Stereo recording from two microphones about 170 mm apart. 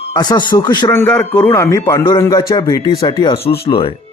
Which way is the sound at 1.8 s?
30° left (ahead or behind).